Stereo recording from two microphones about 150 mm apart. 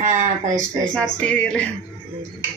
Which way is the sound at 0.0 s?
55° right (ahead or behind).